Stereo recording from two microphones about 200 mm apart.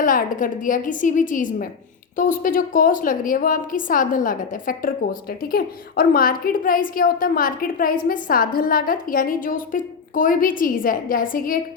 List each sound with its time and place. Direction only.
0.0 s a woman's voice: 45° left (ahead or behind)